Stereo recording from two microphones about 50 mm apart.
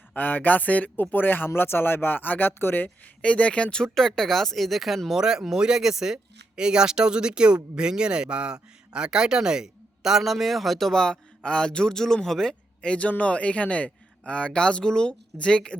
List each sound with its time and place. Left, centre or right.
0.1 s speech: left
3.2 s speech: left; by 11.0 s centre
11.0 s a man's voice: centre